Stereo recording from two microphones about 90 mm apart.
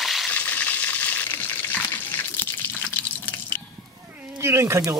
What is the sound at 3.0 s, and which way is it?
Drip, 20° left (ahead or behind).